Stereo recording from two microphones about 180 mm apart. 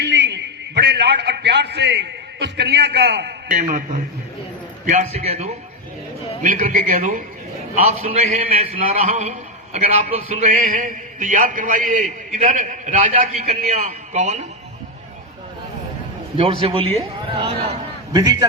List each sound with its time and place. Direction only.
0.0 s a man's voice: 70° right (ahead or behind)
3.5 s a man's voice: 45° right (ahead or behind)
16.4 s a man's voice: 30° right (ahead or behind)